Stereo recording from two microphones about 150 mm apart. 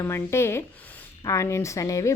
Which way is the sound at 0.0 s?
15° left (ahead or behind).